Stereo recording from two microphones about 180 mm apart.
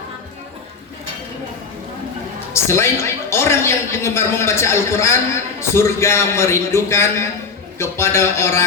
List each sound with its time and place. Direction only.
2.5 s a woman's voice: 15° left (ahead or behind)